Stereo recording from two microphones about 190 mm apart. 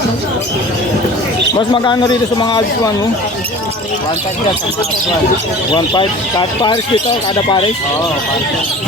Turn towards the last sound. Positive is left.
turn(degrees=25)  # may be behind; listen again after turning